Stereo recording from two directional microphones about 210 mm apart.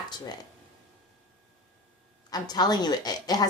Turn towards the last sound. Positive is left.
turn(degrees=20)  # may be behind; listen again after turning